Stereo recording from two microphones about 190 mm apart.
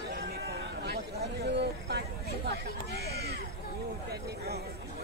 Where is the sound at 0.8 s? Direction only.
60° right (ahead or behind).